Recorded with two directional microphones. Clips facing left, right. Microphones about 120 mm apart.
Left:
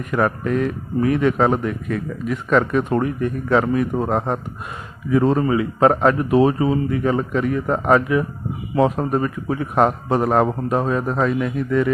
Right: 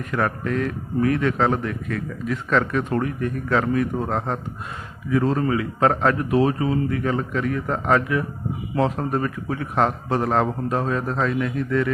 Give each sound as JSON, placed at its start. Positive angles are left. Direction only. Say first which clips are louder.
{"t": 0.0, "sound": "speech", "louder": "left 4 dB", "side_deg": 15}
{"t": 5.1, "sound": "speech", "louder": "left 4 dB", "side_deg": 20}